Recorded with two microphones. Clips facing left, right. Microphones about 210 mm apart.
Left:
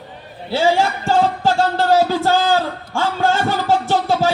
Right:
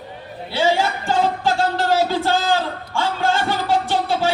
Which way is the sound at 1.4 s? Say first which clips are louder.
Left 3 dB; 40° left (ahead or behind).